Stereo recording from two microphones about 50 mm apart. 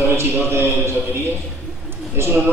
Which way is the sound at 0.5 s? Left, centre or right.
Right.